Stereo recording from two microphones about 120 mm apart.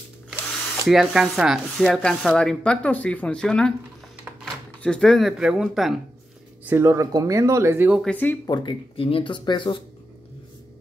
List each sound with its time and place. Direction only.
0.8 s speech: 5° right (ahead or behind)
4.8 s speech: 5° left (ahead or behind)
6.6 s speech: 20° right (ahead or behind)
8.1 s speech: 15° left (ahead or behind)
8.5 s speech: 40° left (ahead or behind)